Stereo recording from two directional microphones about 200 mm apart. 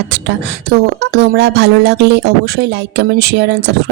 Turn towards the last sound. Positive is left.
turn(degrees=-60)  # may be behind; listen again after turning